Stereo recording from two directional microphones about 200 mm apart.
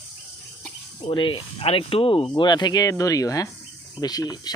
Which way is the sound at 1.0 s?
25° left (ahead or behind).